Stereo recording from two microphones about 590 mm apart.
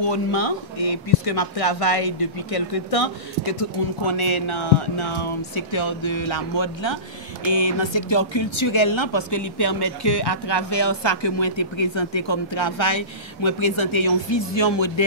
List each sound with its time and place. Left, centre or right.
0.0 s speech: left